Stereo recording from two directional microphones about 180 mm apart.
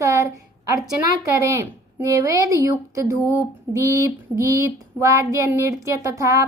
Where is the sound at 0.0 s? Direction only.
15° right (ahead or behind).